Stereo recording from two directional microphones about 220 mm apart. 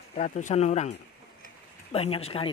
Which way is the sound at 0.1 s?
35° left (ahead or behind).